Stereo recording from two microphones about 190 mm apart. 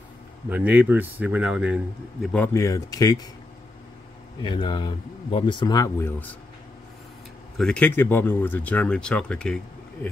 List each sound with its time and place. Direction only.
0.5 s speech: 10° right (ahead or behind)
2.2 s speech: 10° left (ahead or behind)
4.4 s speech: 25° left (ahead or behind); by 6.3 s 10° left (ahead or behind)
7.5 s speech: 5° left (ahead or behind)